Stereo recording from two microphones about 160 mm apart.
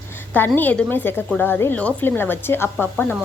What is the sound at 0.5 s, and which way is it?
Speech, 10° left (ahead or behind).